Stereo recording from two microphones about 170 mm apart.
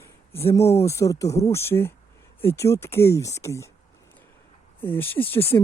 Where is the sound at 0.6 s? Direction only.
35° left (ahead or behind).